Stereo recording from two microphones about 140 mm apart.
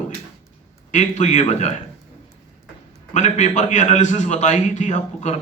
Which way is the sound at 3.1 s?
60° left (ahead or behind).